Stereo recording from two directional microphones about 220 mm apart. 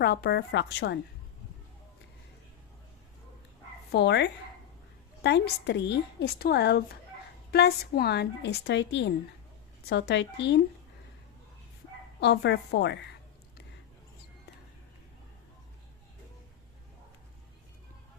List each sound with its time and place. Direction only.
0.0 s a woman's voice: 45° left (ahead or behind)
3.9 s a woman's voice: 50° left (ahead or behind)
12.2 s a woman's voice: 50° left (ahead or behind)